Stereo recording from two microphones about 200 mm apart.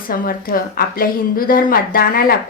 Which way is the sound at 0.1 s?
45° left (ahead or behind).